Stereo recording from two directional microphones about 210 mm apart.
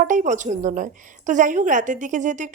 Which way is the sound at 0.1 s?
35° right (ahead or behind).